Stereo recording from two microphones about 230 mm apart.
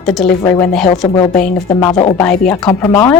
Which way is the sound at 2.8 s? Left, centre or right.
Left.